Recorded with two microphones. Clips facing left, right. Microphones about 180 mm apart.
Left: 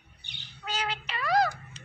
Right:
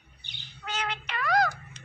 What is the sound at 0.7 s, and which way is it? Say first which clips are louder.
Music: even; 35° left (ahead or behind).